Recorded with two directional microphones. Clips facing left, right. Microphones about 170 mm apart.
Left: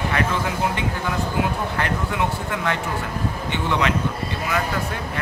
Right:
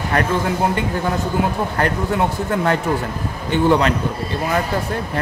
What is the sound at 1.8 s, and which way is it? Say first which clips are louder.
A man's voice: right 6 dB; 40° right (ahead or behind).